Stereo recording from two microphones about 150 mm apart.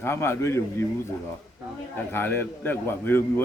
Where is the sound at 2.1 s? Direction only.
15° left (ahead or behind).